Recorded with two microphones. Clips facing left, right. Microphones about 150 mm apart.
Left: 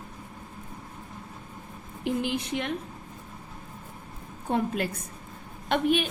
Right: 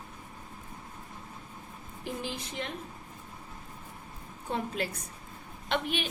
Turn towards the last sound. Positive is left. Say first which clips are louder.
# left 7 dB
turn(degrees=50)  # may be behind; listen again after turning